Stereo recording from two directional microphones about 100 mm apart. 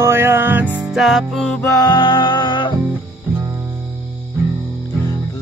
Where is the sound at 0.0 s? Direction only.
25° right (ahead or behind).